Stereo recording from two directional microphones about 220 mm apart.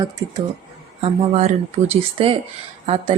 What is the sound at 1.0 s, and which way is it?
A woman's voice, 30° right (ahead or behind).